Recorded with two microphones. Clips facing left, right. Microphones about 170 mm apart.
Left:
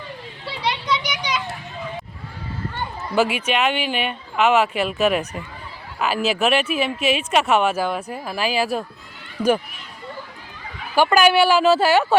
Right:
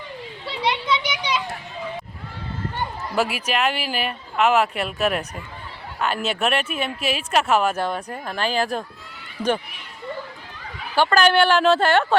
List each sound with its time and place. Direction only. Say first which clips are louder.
1.0 s children playing: right 1 dB; 25° right (ahead or behind)
3.2 s speech: left 3 dB; centre (ahead or behind)
10.9 s speech: left 2 dB; 10° left (ahead or behind)